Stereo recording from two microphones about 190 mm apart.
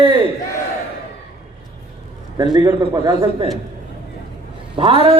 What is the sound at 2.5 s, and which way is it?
Speech, 20° right (ahead or behind).